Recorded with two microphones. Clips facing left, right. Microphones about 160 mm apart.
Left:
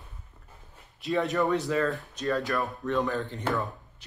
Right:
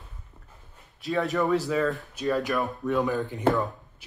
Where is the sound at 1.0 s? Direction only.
Centre (ahead or behind).